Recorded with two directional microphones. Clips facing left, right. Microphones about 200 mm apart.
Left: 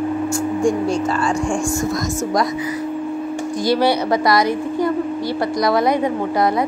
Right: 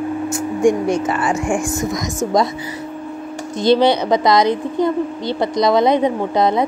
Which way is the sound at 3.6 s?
20° right (ahead or behind).